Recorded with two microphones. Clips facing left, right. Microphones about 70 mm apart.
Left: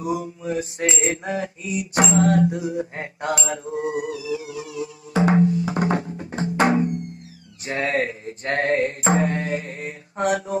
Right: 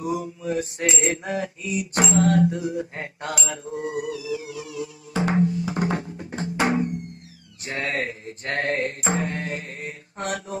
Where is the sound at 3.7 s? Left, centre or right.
Left.